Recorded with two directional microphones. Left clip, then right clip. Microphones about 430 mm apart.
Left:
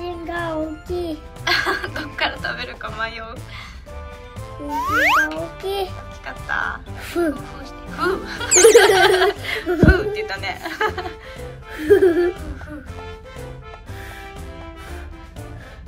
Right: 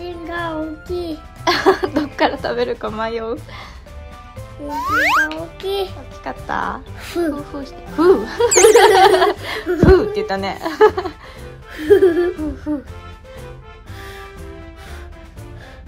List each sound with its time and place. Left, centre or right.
0.0 s music: centre
1.4 s a sound: centre
4.6 s a child's voice: centre
6.2 s speech: centre
7.0 s a child's voice: centre
7.6 s speech: centre
8.5 s a child's voice: centre
9.2 s speech: centre
11.7 s a child's voice: centre